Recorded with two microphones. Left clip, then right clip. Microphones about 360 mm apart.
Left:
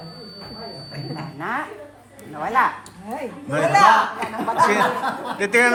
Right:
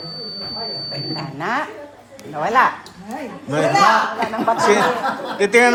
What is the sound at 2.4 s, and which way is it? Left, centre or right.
Speech, right.